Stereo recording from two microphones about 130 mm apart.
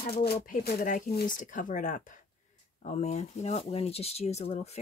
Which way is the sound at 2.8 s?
60° left (ahead or behind).